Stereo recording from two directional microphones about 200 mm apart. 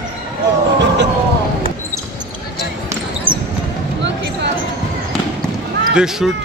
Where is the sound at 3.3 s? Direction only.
25° right (ahead or behind).